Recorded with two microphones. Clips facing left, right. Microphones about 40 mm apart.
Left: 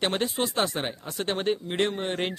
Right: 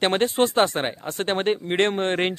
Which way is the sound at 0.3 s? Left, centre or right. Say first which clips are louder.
Right 8 dB; right.